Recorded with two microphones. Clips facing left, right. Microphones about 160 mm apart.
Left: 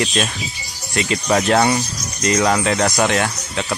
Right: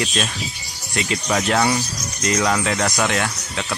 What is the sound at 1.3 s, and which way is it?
Speech, 40° left (ahead or behind).